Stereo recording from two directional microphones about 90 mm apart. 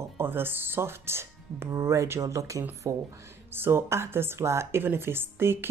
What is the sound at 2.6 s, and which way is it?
Speech, 20° right (ahead or behind).